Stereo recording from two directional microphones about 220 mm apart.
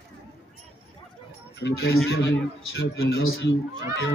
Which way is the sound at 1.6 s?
55° left (ahead or behind).